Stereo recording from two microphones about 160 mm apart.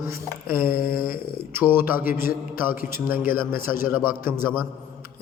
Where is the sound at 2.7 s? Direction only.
65° left (ahead or behind).